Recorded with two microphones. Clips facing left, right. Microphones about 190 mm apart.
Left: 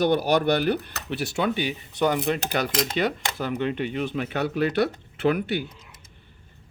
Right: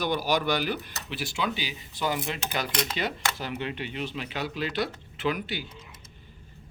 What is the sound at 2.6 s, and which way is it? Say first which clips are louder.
Speech: left 2 dB; 55° left (ahead or behind).